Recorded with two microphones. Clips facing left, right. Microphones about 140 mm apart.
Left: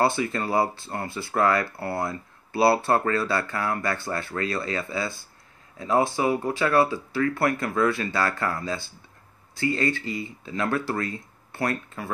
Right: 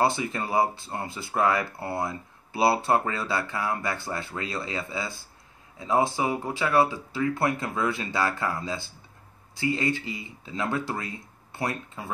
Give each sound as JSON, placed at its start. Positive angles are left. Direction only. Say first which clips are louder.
{"t": 0.0, "sound": "speech", "louder": "left 2 dB", "side_deg": -20}